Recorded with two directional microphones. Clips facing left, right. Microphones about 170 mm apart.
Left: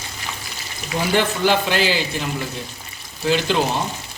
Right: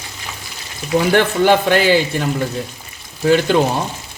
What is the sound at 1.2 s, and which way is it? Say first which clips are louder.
A man's voice: right 3 dB; 55° right (ahead or behind).